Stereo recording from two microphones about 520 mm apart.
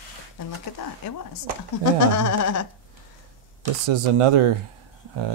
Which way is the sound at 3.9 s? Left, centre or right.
Right.